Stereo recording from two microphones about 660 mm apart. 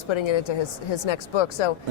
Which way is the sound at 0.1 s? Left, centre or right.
Left.